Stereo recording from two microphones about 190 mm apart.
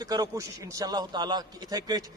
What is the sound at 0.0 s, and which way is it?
A man's voice, 20° right (ahead or behind).